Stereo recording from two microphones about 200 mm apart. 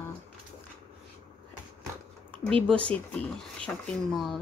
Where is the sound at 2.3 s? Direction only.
5° left (ahead or behind).